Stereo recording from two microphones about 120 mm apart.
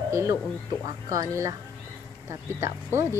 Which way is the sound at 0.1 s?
25° right (ahead or behind).